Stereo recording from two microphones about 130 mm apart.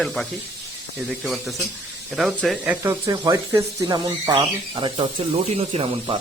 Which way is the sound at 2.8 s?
25° right (ahead or behind).